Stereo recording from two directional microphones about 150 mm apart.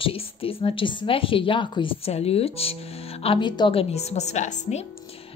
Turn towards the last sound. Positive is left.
turn(degrees=50)  # may be behind; listen again after turning